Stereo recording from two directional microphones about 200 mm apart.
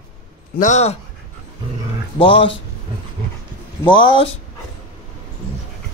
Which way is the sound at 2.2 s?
25° left (ahead or behind).